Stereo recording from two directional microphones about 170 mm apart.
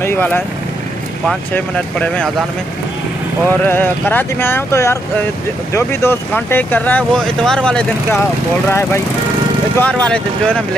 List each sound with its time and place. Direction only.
0.0 s speech: 10° left (ahead or behind)
3.4 s speech: 10° left (ahead or behind)